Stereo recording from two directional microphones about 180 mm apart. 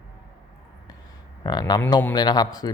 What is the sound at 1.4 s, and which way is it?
Speech, 25° left (ahead or behind).